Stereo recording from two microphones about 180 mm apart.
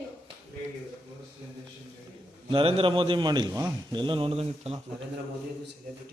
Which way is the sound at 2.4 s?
30° right (ahead or behind).